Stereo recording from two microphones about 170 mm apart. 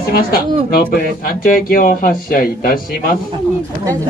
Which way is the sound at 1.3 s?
60° left (ahead or behind).